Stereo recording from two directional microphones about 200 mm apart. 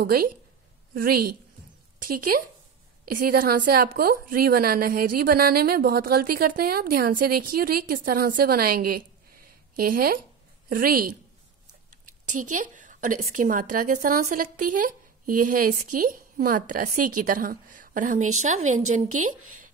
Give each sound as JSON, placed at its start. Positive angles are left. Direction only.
{"t": 0.0, "sound": "a woman's voice", "side_deg": -50}
{"t": 12.3, "sound": "a woman's voice", "side_deg": -40}